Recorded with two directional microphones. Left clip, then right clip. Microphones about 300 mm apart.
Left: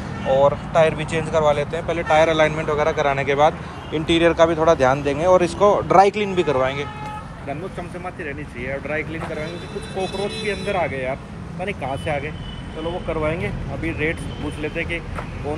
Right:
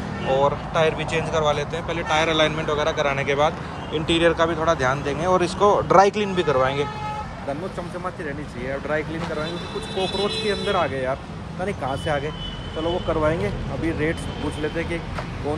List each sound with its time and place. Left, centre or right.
0.3 s speech: centre
8.6 s speech: centre
10.1 s speech: right
13.8 s speech: right